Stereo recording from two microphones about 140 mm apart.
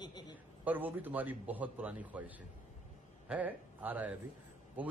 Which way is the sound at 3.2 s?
10° right (ahead or behind).